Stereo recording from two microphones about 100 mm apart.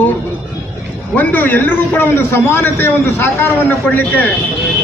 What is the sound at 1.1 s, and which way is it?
A man's voice, 15° left (ahead or behind).